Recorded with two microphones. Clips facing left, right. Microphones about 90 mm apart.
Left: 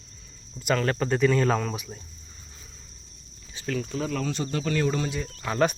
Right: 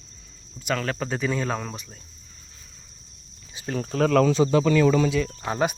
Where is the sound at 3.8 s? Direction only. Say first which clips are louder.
Right 10 dB; 55° right (ahead or behind).